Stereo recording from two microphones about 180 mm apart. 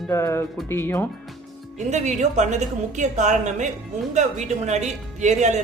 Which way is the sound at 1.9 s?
40° right (ahead or behind).